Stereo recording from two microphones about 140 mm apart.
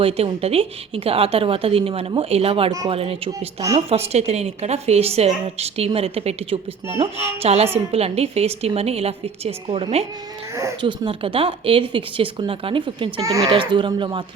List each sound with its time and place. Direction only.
0.0 s a woman's voice: 45° right (ahead or behind)
13.2 s speech: 25° right (ahead or behind)
13.5 s speech: 35° right (ahead or behind)